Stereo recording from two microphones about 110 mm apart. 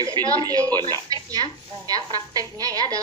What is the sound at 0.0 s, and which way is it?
Speech, 35° right (ahead or behind).